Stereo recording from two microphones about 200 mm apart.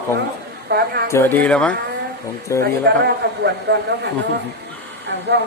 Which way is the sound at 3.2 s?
55° right (ahead or behind).